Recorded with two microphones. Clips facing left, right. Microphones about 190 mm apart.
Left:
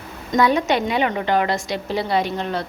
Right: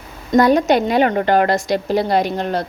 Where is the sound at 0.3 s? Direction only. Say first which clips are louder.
Right 5 dB; 40° right (ahead or behind).